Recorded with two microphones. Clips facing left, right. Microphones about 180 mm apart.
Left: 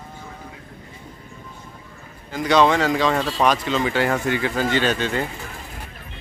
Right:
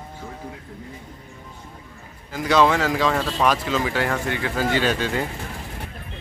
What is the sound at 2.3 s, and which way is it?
Speech, 5° right (ahead or behind).